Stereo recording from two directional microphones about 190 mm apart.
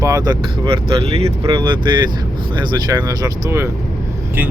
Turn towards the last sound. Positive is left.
turn(degrees=-15)  # may be behind; listen again after turning